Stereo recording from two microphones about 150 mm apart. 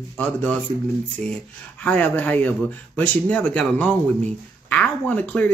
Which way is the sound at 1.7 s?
10° left (ahead or behind).